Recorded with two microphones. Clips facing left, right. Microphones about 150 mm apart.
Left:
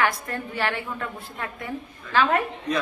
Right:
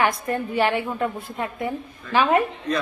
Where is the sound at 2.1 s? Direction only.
15° right (ahead or behind).